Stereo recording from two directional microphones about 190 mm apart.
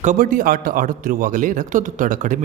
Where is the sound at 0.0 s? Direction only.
45° right (ahead or behind).